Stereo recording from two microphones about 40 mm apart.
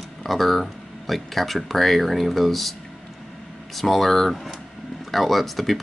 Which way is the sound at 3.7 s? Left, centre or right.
Centre.